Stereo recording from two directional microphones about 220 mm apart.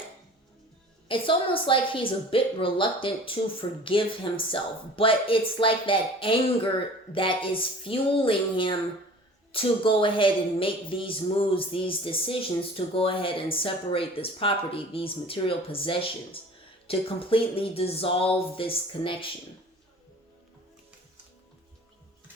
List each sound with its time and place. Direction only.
1.0 s a woman's voice: 25° left (ahead or behind)